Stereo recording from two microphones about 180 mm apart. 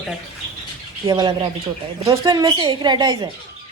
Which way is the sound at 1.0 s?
25° right (ahead or behind).